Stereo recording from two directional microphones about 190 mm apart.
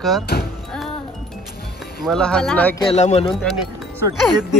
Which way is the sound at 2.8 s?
35° left (ahead or behind).